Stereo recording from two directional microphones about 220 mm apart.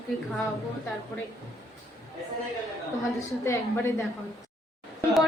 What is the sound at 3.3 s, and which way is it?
Speech, 15° left (ahead or behind).